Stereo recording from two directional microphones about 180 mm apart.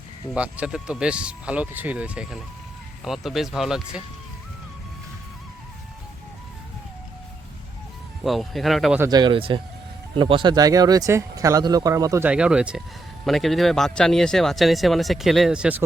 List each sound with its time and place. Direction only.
0.3 s speech: 5° right (ahead or behind)
8.2 s speech: centre (ahead or behind)
9.0 s speech: 20° right (ahead or behind)
12.3 s speech: 5° right (ahead or behind)